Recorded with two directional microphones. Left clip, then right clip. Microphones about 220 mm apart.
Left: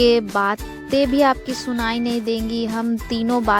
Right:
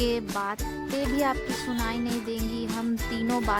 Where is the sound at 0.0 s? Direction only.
30° left (ahead or behind).